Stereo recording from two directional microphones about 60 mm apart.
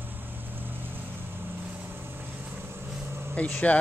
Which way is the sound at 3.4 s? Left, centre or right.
Left.